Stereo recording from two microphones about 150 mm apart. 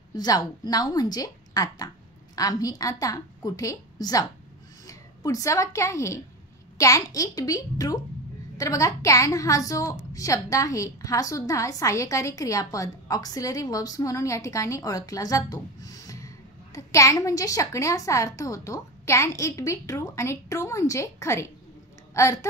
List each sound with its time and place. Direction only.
0.1 s a woman's voice: 25° left (ahead or behind)